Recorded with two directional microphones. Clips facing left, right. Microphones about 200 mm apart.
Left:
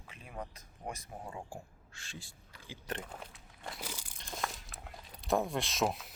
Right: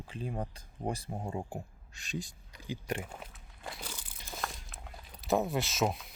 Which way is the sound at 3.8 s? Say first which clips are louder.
Left 1 dB; 10° left (ahead or behind).